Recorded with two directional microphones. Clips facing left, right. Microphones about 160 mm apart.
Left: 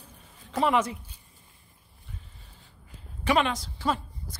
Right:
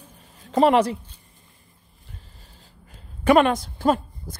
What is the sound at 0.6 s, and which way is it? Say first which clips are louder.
Speech: right 7 dB; 75° right (ahead or behind).